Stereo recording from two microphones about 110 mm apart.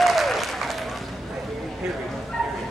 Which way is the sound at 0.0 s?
Centre (ahead or behind).